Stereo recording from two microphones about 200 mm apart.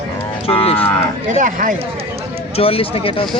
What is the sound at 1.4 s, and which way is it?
Speech, 40° right (ahead or behind).